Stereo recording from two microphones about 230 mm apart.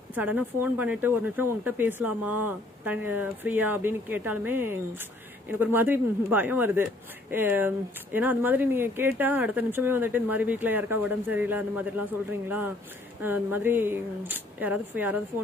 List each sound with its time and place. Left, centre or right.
0.1 s speech: centre